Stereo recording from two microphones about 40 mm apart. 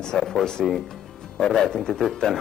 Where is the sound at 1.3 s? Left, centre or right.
Centre.